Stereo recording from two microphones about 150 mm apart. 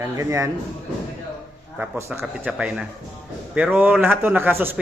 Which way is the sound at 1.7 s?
10° right (ahead or behind).